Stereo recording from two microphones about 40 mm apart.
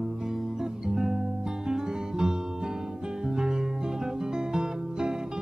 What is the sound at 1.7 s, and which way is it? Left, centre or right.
Music, centre.